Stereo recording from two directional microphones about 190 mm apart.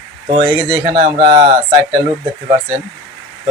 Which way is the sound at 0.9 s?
40° right (ahead or behind).